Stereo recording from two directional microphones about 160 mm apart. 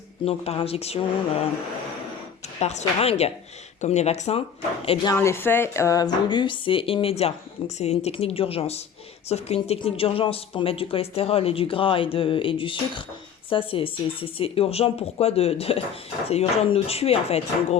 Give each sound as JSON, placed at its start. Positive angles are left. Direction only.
{"t": 0.3, "sound": "speech", "side_deg": 40}
{"t": 2.6, "sound": "speech", "side_deg": 45}
{"t": 5.1, "sound": "speech", "side_deg": 15}